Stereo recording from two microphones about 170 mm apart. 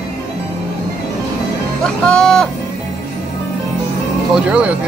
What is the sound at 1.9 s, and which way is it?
Speech, 5° left (ahead or behind).